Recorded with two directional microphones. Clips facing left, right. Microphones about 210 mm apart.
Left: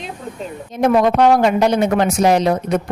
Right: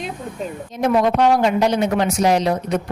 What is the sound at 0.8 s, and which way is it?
Speech, 55° left (ahead or behind).